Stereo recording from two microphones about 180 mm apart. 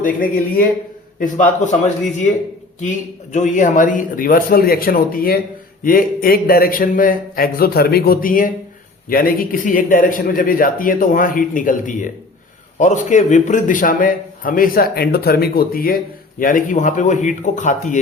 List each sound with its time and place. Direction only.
0.0 s a man's voice: 50° left (ahead or behind)
1.2 s a man's voice: 45° left (ahead or behind)
3.3 s a man's voice: 45° left (ahead or behind)